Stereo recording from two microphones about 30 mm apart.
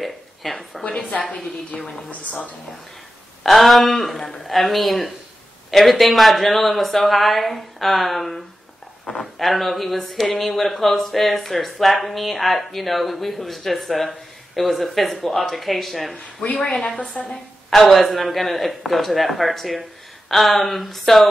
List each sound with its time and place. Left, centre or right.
0.0 s speech: centre
1.7 s a woman's voice: left
2.0 s a woman's voice: left
3.4 s a woman's voice: centre
17.1 s a woman's voice: left
17.6 s speech: centre